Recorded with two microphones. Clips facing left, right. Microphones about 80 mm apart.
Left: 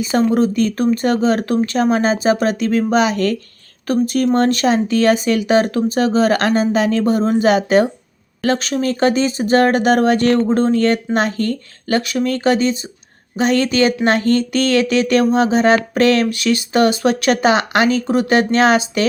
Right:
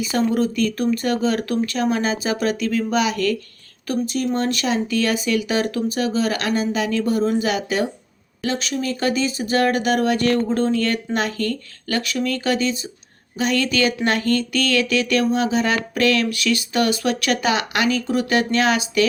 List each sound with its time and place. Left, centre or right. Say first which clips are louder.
0.0 s speech: left 5 dB; left
3.8 s speech: left 6 dB; left